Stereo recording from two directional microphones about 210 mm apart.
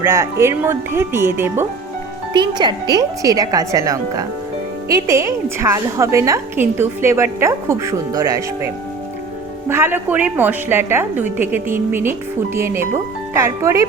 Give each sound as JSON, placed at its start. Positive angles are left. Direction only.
{"t": 0.0, "sound": "a woman's voice", "side_deg": -10}